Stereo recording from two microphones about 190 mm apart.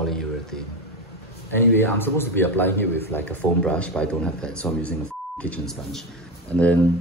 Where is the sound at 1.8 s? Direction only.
10° left (ahead or behind).